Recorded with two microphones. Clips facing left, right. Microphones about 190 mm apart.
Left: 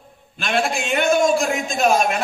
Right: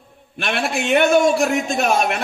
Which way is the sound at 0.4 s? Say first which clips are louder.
Even; 65° right (ahead or behind).